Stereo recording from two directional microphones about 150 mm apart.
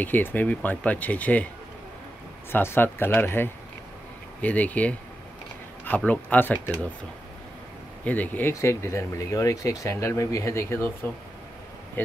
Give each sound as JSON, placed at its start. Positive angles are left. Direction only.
{"t": 0.0, "sound": "speech", "side_deg": 10}
{"t": 2.5, "sound": "speech", "side_deg": 15}
{"t": 8.0, "sound": "speech", "side_deg": 10}